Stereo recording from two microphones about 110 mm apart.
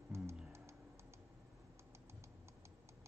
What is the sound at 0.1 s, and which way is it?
Music, 25° right (ahead or behind).